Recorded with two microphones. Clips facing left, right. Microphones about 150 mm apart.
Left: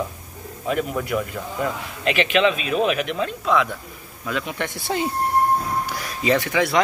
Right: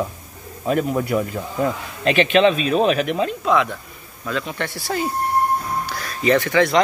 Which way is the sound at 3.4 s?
Centre (ahead or behind).